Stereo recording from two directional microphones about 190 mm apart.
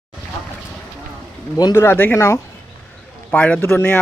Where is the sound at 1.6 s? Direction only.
15° left (ahead or behind).